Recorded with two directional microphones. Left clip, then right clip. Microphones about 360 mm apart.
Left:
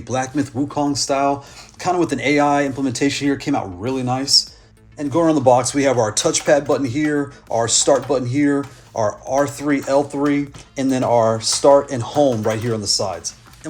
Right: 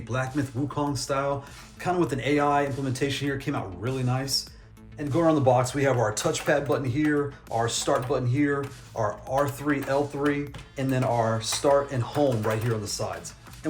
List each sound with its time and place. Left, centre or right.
0.1 s speech: centre
11.1 s speech: left
11.3 s speech: centre